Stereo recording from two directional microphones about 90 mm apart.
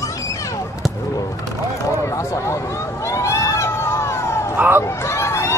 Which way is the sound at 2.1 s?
35° left (ahead or behind).